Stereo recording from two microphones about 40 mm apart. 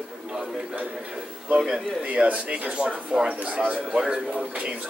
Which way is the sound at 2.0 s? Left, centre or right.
Right.